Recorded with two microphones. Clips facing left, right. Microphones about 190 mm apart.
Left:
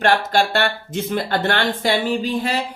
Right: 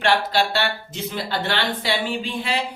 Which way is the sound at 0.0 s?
45° left (ahead or behind).